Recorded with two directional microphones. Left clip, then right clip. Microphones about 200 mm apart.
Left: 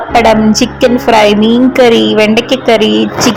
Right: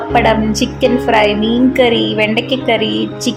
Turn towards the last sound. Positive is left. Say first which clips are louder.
# left 8 dB
turn(degrees=20)  # may be behind; listen again after turning